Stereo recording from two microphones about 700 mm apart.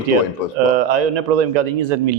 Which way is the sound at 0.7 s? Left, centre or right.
Right.